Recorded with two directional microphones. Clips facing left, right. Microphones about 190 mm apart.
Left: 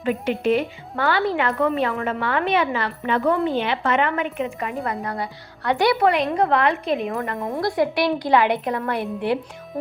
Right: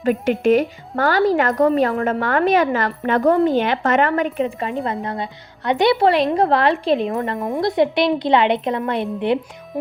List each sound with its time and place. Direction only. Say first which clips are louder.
0.4 s a woman's voice: right 5 dB; 45° right (ahead or behind)
7.3 s a woman's voice: right 4 dB; 20° right (ahead or behind)